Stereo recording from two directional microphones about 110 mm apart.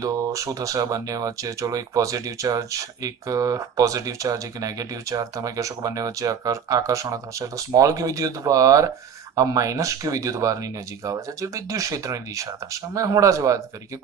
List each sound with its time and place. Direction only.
0.0 s speech: 30° right (ahead or behind)